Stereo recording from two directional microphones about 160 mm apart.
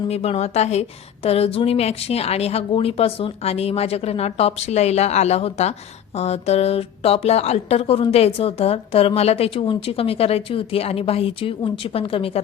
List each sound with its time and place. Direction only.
0.1 s a woman's voice: 40° left (ahead or behind)